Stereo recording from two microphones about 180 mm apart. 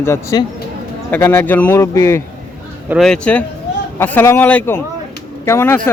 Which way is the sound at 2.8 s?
Centre (ahead or behind).